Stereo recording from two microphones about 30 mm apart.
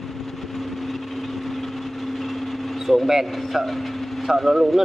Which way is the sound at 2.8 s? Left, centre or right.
Centre.